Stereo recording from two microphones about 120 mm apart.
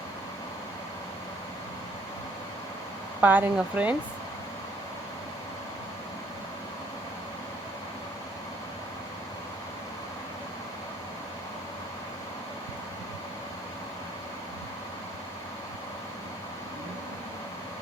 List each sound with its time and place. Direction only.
3.2 s speech: 15° right (ahead or behind)